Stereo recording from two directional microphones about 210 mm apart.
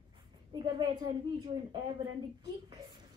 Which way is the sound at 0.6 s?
20° right (ahead or behind).